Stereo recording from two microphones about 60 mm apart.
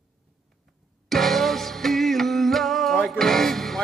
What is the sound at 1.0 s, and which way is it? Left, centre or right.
Music, centre.